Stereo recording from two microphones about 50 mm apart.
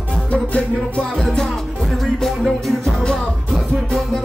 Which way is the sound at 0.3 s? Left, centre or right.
Left.